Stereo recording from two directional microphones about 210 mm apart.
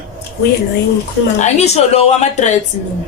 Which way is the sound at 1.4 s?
30° left (ahead or behind).